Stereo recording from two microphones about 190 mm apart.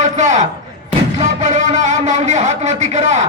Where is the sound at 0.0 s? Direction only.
40° right (ahead or behind).